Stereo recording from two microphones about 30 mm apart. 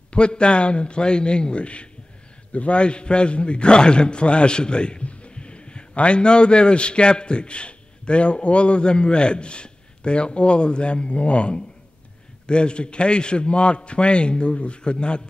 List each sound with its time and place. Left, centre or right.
0.1 s a man's voice: left